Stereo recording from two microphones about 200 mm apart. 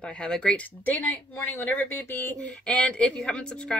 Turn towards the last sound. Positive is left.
turn(degrees=5)  # may be behind; listen again after turning